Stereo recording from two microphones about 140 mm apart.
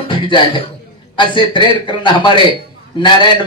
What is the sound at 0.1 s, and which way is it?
A man's voice, 35° left (ahead or behind).